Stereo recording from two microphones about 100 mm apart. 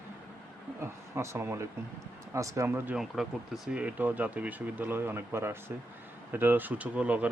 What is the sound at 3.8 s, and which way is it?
Speech, 15° right (ahead or behind).